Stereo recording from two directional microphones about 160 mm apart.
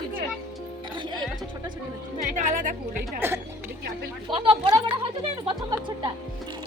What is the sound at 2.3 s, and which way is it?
Music, 55° right (ahead or behind).